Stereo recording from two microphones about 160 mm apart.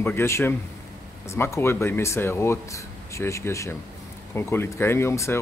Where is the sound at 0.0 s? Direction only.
15° left (ahead or behind).